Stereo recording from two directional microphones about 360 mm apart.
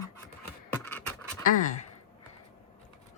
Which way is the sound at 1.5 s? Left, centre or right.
Left.